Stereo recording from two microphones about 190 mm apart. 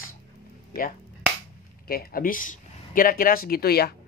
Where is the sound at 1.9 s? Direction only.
55° left (ahead or behind).